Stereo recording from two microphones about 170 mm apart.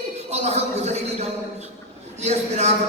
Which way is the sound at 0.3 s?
40° right (ahead or behind).